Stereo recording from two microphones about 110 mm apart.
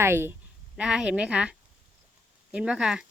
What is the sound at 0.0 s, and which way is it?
Speech, 20° right (ahead or behind).